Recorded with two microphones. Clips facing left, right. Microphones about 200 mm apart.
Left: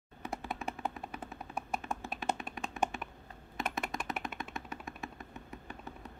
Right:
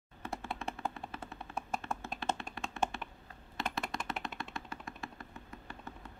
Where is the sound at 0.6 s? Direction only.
15° left (ahead or behind).